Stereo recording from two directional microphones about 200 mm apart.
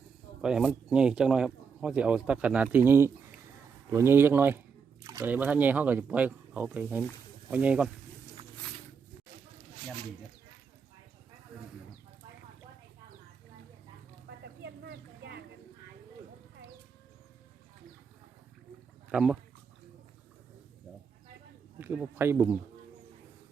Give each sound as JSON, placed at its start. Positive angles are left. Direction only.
{"t": 0.4, "sound": "a man's voice", "side_deg": -5}
{"t": 14.3, "sound": "a sound", "side_deg": -55}
{"t": 19.1, "sound": "a man's voice", "side_deg": -5}
{"t": 21.8, "sound": "speech", "side_deg": -10}